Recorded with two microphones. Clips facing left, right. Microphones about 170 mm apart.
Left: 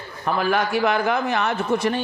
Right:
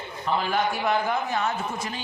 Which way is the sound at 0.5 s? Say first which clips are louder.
Left 5 dB; 75° left (ahead or behind).